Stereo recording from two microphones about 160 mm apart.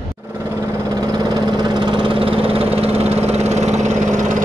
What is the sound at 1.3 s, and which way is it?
Engine, 25° right (ahead or behind).